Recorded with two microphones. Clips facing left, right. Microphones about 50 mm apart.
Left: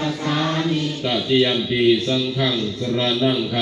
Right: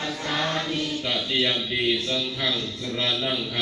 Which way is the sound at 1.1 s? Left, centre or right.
Centre.